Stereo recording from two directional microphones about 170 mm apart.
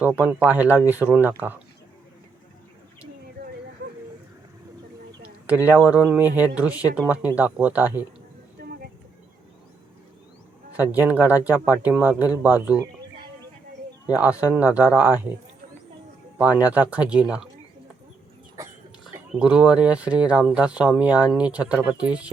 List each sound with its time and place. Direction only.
0.2 s speech: 10° right (ahead or behind)
5.5 s speech: 10° right (ahead or behind)
8.6 s vehicle: 60° right (ahead or behind)
10.8 s speech: 10° right (ahead or behind)
14.1 s speech: 10° right (ahead or behind)
16.4 s speech: 10° right (ahead or behind)
19.3 s speech: 5° right (ahead or behind)